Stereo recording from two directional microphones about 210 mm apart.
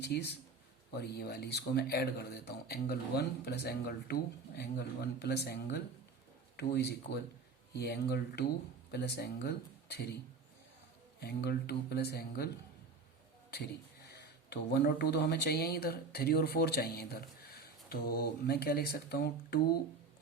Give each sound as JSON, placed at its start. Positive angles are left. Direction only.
{"t": 0.0, "sound": "speech", "side_deg": 50}
{"t": 11.2, "sound": "speech", "side_deg": 50}
{"t": 14.5, "sound": "speech", "side_deg": 50}